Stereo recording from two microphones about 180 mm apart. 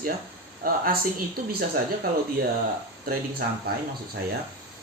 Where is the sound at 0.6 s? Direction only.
55° right (ahead or behind).